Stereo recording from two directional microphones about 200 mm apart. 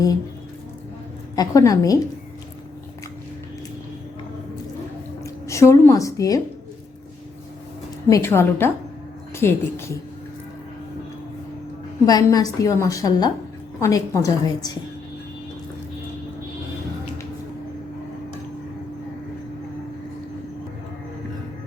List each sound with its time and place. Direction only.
1.4 s a woman's voice: 15° left (ahead or behind)
5.2 s a woman's voice: 15° left (ahead or behind)
8.1 s a woman's voice: 10° left (ahead or behind)
12.0 s a woman's voice: 20° left (ahead or behind)